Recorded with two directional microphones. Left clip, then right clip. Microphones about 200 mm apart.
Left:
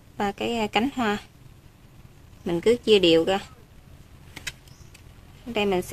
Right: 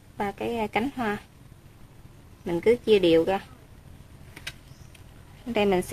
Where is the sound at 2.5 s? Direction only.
25° left (ahead or behind).